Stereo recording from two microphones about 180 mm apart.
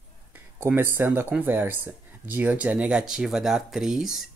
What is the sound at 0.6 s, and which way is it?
Speech, 10° right (ahead or behind).